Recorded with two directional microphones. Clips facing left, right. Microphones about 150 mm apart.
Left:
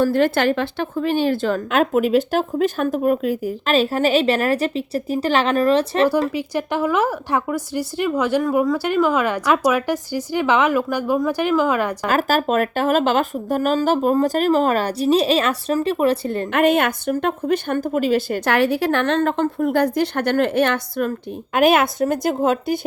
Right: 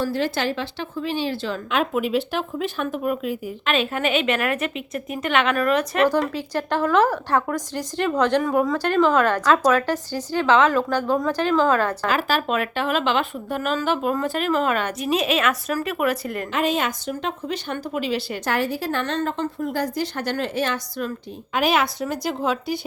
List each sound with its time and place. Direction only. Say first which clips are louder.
0.0 s a woman's voice: left 7 dB; 55° left (ahead or behind); by 6.1 s 30° left (ahead or behind)
6.3 s speech: left 2 dB; 15° left (ahead or behind)
12.0 s a woman's voice: left 4 dB; 45° left (ahead or behind); by 16.5 s 30° left (ahead or behind)
16.5 s a woman's voice: left 6 dB; 60° left (ahead or behind)
18.4 s a woman's voice: left 5 dB; 70° left (ahead or behind); by 22.8 s 50° left (ahead or behind)